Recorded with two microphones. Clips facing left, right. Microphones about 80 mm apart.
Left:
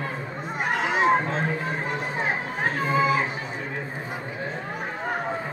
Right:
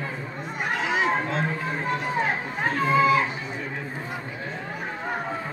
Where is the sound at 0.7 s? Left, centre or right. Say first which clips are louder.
Left 1 dB; left.